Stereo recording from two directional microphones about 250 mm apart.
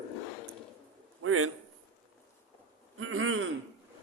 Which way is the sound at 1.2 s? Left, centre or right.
Right.